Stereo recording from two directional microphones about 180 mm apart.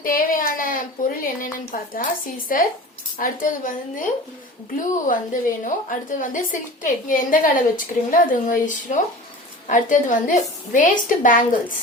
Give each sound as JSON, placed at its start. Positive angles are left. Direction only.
{"t": 0.0, "sound": "a woman's voice", "side_deg": 50}